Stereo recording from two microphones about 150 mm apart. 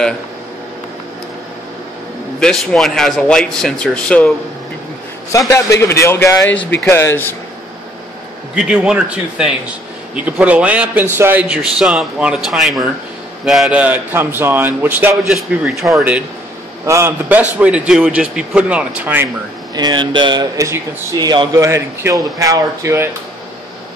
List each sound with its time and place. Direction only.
2.4 s speech: centre (ahead or behind)
5.5 s a man's voice: 20° left (ahead or behind)
8.5 s a man's voice: 5° right (ahead or behind)
15.3 s a man's voice: centre (ahead or behind)
19.7 s speech: 30° right (ahead or behind)